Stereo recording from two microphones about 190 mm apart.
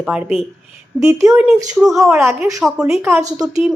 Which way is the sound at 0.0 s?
5° right (ahead or behind).